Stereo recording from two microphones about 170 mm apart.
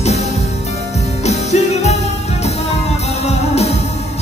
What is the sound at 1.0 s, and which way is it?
Music, 40° left (ahead or behind).